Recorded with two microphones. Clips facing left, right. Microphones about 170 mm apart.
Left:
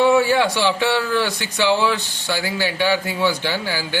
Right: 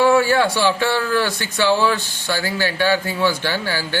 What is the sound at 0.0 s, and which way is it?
A man's voice, 15° left (ahead or behind).